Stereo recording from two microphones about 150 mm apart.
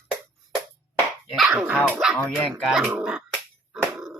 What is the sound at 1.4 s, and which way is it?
Speech, 5° right (ahead or behind).